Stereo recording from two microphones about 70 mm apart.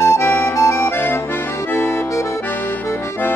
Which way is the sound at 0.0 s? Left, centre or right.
Left.